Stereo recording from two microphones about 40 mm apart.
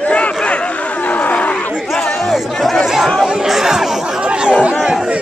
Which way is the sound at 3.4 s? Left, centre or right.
Centre.